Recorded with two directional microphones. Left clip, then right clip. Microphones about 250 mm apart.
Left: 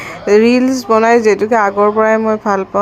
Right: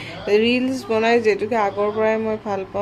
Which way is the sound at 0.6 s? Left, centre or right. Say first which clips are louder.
Left 9 dB; left.